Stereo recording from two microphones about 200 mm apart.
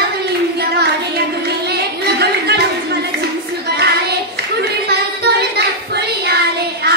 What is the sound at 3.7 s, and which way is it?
Child singing, 55° right (ahead or behind).